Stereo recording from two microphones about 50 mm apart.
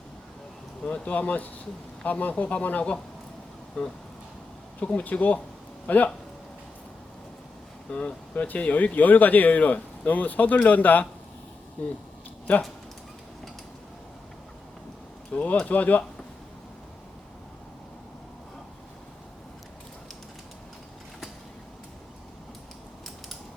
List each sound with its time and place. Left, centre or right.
0.9 s speech: left
7.9 s speech: left
15.3 s speech: left